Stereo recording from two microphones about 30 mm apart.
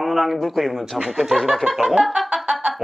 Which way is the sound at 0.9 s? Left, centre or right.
Right.